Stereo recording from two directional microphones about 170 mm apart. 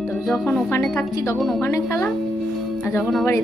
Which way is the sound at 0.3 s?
15° left (ahead or behind).